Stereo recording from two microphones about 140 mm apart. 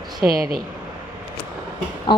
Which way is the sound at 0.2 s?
10° right (ahead or behind).